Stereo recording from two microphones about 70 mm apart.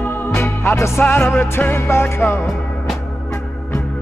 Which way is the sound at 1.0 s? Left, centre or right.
Left.